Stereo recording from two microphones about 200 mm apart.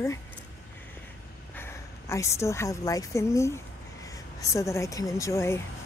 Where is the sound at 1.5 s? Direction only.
10° left (ahead or behind).